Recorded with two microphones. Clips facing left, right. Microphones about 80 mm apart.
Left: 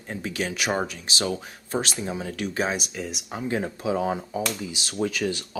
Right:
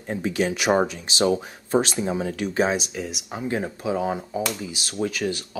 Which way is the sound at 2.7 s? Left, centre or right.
Centre.